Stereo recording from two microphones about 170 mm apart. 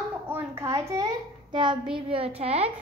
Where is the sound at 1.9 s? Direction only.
30° right (ahead or behind).